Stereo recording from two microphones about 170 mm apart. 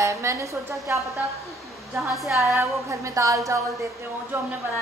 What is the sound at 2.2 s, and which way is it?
A woman's voice, 15° right (ahead or behind).